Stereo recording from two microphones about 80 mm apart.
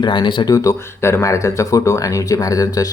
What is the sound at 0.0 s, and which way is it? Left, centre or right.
Speech, left.